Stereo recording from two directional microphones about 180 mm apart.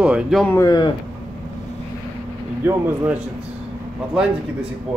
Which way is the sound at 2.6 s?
10° right (ahead or behind).